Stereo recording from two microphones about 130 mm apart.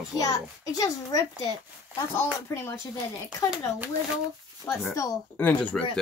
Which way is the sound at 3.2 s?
10° right (ahead or behind).